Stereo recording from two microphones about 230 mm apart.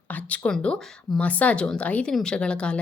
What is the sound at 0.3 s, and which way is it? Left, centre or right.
Speech, centre.